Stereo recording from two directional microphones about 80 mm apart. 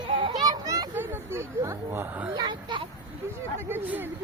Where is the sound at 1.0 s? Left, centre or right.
Right.